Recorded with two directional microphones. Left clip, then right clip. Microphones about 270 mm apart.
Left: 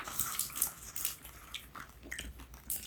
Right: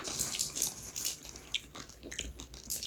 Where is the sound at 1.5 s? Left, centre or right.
Centre.